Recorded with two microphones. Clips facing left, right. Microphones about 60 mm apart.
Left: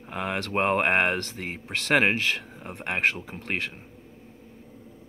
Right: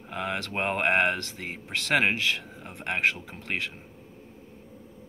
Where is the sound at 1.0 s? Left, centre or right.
Left.